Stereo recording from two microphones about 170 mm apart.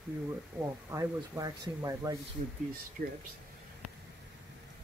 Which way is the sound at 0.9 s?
20° right (ahead or behind).